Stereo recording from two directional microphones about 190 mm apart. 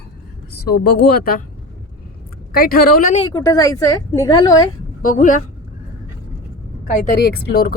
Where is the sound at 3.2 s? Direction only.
20° left (ahead or behind).